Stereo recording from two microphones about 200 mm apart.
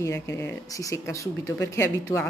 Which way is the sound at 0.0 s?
15° left (ahead or behind).